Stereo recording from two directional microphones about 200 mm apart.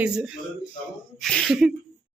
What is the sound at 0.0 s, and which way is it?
Speech, 5° right (ahead or behind).